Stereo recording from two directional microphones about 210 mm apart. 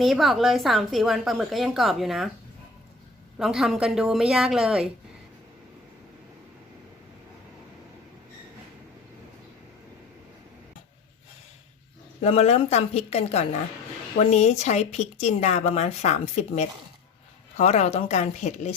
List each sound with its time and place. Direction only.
0.0 s a woman's voice: centre (ahead or behind)
3.3 s a woman's voice: centre (ahead or behind)
12.2 s speech: 30° left (ahead or behind)